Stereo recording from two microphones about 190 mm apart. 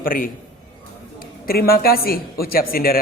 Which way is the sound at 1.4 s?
50° left (ahead or behind).